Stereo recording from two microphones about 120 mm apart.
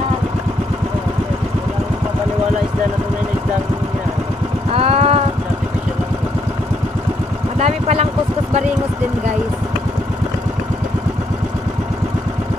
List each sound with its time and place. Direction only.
4.7 s vehicle: 55° right (ahead or behind)
7.5 s vehicle: 60° right (ahead or behind)